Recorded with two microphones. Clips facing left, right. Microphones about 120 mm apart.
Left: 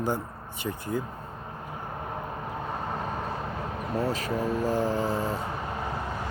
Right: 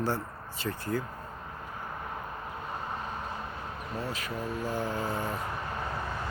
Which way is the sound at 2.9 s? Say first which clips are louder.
Left 5 dB; 40° left (ahead or behind).